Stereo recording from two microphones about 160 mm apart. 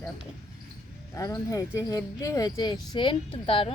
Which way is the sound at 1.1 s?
20° left (ahead or behind).